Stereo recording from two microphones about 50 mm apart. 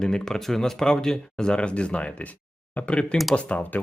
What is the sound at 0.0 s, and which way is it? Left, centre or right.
Speech, centre.